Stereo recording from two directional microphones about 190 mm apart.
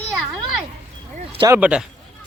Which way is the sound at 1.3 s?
25° right (ahead or behind).